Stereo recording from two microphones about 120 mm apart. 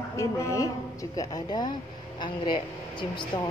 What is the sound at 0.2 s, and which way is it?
Speech, 25° left (ahead or behind).